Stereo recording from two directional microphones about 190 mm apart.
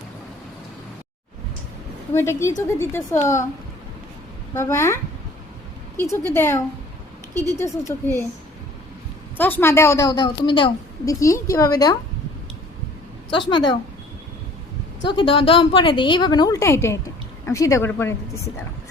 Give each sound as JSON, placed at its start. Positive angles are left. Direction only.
{"t": 2.1, "sound": "a woman's voice", "side_deg": 15}
{"t": 4.5, "sound": "a woman's voice", "side_deg": 15}
{"t": 6.0, "sound": "a woman's voice", "side_deg": 10}
{"t": 7.6, "sound": "a woman's voice", "side_deg": 15}
{"t": 9.4, "sound": "a woman's voice", "side_deg": 10}
{"t": 13.3, "sound": "a woman's voice", "side_deg": 25}
{"t": 15.0, "sound": "a woman's voice", "side_deg": 25}